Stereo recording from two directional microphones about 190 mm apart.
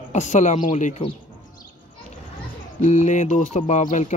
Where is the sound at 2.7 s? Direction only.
35° left (ahead or behind).